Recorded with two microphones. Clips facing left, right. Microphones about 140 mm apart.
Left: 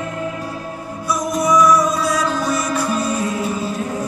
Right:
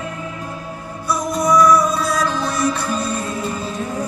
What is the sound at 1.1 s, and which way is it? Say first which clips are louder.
Music: even; 5° left (ahead or behind).